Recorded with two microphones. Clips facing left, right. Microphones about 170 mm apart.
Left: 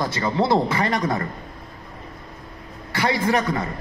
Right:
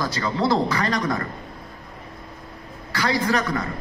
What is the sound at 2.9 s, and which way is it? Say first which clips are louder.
Speech: left 1 dB; 25° left (ahead or behind).